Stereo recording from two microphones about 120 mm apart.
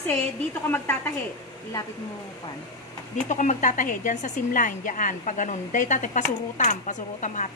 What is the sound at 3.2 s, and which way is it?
Speech, 90° left.